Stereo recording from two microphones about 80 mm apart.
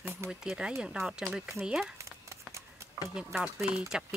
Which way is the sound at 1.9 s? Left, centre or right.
Right.